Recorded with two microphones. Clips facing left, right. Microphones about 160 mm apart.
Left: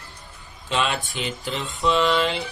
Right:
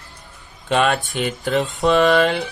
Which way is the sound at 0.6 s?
55° right (ahead or behind).